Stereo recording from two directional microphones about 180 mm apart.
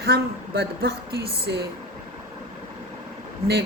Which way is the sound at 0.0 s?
60° right (ahead or behind).